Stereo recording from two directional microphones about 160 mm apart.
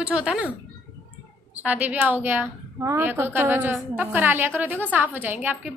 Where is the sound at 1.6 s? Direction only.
10° right (ahead or behind).